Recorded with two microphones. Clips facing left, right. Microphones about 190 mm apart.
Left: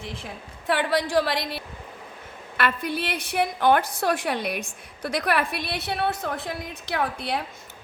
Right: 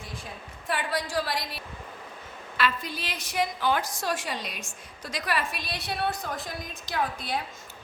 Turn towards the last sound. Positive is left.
turn(degrees=65)  # may be behind; listen again after turning